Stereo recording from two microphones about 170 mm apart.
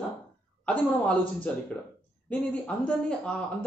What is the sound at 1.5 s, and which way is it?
Speech, 5° left (ahead or behind).